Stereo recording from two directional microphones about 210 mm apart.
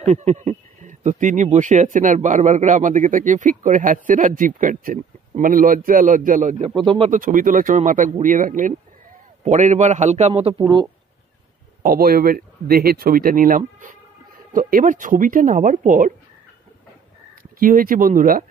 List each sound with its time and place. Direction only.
0.0 s speech: 35° right (ahead or behind)
6.7 s speech: 25° right (ahead or behind)
7.1 s speech: 40° right (ahead or behind)
11.8 s speech: 45° right (ahead or behind)
17.4 s speech: 40° right (ahead or behind)